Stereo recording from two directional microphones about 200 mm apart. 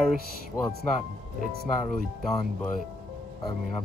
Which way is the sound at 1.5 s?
50° right (ahead or behind).